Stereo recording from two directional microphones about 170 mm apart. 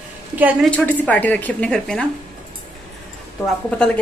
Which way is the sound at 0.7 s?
10° left (ahead or behind).